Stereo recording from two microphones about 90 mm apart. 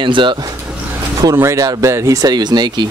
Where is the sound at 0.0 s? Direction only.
65° right (ahead or behind).